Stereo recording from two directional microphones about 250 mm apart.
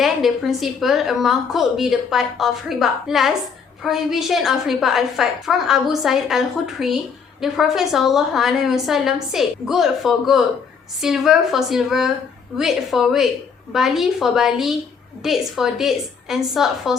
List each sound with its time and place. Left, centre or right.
0.0 s a woman's voice: centre